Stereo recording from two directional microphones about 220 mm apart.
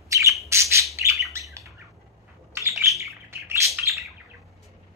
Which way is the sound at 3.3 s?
10° right (ahead or behind).